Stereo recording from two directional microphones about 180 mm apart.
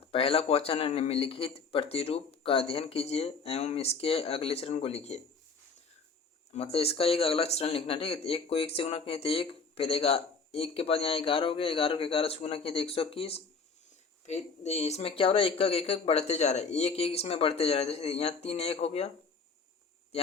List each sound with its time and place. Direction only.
0.1 s speech: 30° left (ahead or behind)
6.5 s speech: 35° left (ahead or behind)